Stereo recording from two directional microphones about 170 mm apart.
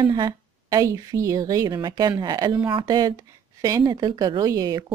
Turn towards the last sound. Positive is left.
turn(degrees=-20)  # may be behind; listen again after turning